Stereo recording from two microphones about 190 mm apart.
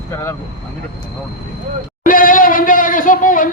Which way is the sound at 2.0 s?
45° left (ahead or behind).